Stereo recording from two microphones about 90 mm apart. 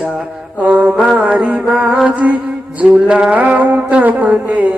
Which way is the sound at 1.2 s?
15° right (ahead or behind).